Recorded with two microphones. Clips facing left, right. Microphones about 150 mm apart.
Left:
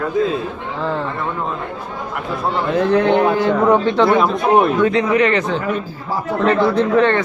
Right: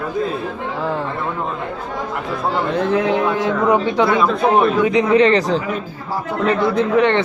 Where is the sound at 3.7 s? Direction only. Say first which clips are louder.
Left 1 dB; 10° right (ahead or behind).